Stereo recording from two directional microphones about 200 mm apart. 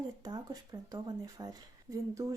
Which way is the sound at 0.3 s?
20° right (ahead or behind).